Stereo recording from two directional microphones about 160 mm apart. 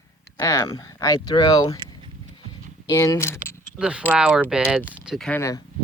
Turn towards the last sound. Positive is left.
turn(degrees=20)  # may be behind; listen again after turning